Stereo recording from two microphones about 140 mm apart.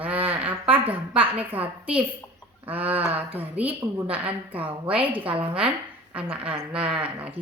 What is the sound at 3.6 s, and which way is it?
Speech, 40° right (ahead or behind).